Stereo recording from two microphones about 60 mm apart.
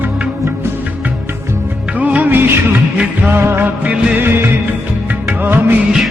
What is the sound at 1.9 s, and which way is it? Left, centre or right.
Music of bollywood, right.